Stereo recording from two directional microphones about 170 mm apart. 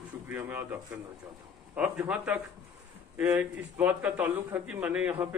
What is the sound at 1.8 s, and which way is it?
A man's voice, 5° right (ahead or behind).